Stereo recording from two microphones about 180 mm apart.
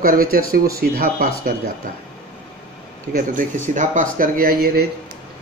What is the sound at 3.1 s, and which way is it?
Speech, 50° right (ahead or behind).